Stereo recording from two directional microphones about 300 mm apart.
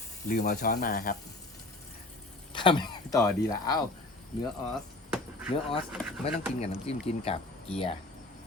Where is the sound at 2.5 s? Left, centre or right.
Centre.